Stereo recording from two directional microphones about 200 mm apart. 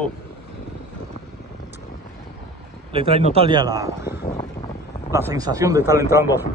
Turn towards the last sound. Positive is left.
turn(degrees=-15)  # may be behind; listen again after turning